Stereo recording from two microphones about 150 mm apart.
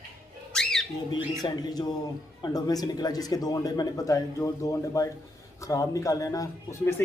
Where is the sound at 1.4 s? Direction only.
25° left (ahead or behind).